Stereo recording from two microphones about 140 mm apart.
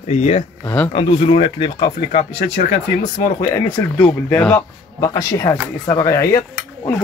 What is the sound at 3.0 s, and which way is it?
Speech, 30° left (ahead or behind).